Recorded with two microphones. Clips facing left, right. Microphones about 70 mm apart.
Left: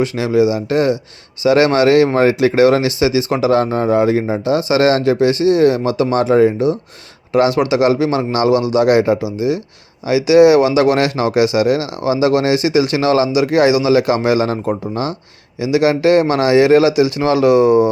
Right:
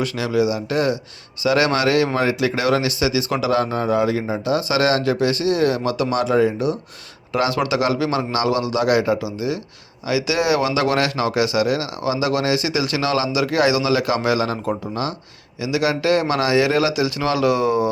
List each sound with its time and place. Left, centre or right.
0.0 s speech: left